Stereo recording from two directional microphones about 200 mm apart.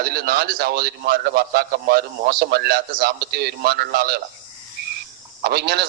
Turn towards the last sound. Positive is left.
turn(degrees=-55)  # may be behind; listen again after turning